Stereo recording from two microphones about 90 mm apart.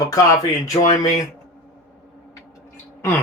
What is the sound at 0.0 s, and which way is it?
Speech, 40° left (ahead or behind).